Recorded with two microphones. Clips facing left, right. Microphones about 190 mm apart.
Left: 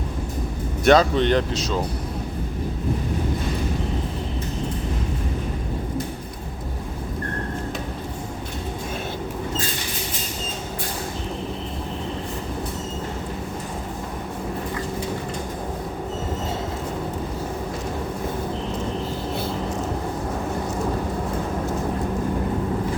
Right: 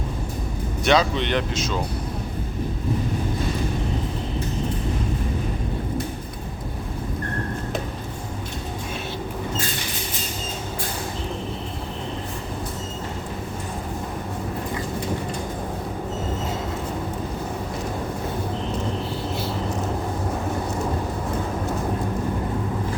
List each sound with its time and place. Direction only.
0.9 s speech: 45° left (ahead or behind)